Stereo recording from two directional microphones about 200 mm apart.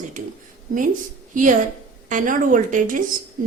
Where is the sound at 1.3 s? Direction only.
40° right (ahead or behind).